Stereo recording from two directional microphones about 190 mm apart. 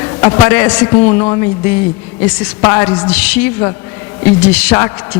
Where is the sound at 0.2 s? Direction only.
15° left (ahead or behind).